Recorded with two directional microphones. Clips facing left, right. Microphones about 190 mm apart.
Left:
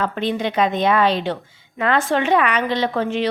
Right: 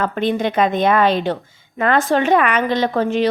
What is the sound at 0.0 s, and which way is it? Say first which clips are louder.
A woman's voice: right 3 dB; 50° right (ahead or behind).